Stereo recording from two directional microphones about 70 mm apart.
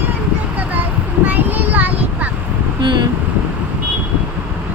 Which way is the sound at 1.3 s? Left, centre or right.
Right.